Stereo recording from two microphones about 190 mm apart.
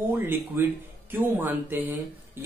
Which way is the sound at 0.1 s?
10° right (ahead or behind).